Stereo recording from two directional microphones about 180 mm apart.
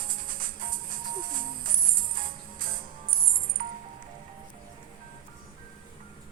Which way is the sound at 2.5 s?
50° right (ahead or behind).